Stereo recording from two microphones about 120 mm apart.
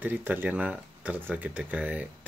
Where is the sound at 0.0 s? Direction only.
15° right (ahead or behind).